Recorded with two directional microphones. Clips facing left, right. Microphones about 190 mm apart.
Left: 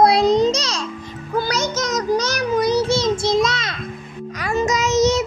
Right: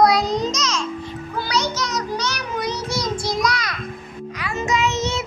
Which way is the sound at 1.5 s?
45° left (ahead or behind).